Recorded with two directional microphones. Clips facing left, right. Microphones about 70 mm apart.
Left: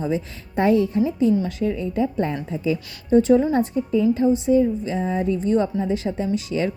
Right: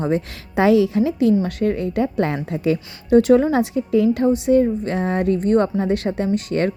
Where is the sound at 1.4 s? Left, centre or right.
Right.